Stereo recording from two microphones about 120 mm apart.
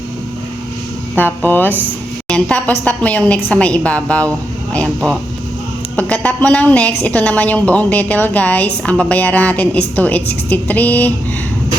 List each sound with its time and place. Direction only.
1.1 s a woman's voice: 15° left (ahead or behind)
6.0 s a woman's voice: 15° left (ahead or behind)